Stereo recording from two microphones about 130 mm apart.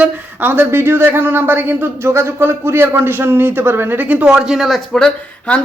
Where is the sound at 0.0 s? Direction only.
15° right (ahead or behind).